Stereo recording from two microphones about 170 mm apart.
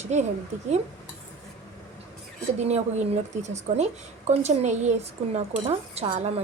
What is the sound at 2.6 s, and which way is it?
Speech, 40° right (ahead or behind).